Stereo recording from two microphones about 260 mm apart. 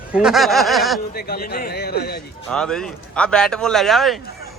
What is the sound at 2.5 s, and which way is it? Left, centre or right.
A man's voice, centre.